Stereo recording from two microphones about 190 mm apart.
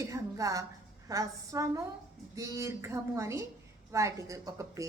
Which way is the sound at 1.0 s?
15° right (ahead or behind).